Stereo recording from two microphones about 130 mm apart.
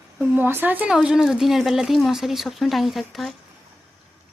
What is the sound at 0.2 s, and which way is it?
A woman's voice, 15° right (ahead or behind).